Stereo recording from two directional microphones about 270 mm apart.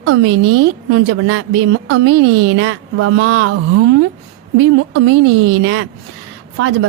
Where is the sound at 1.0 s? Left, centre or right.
Right.